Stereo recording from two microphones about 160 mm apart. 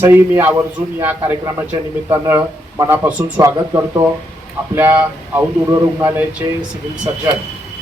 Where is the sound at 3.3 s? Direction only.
20° right (ahead or behind).